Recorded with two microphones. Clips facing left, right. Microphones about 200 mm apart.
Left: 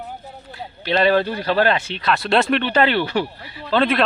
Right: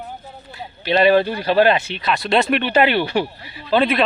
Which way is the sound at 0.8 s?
15° right (ahead or behind).